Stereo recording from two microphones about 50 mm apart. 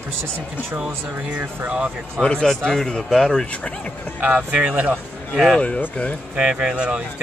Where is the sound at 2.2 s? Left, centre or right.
Centre.